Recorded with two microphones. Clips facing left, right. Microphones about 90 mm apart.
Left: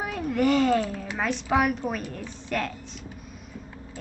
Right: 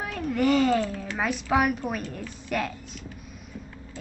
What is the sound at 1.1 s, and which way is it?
A woman's voice, 5° right (ahead or behind).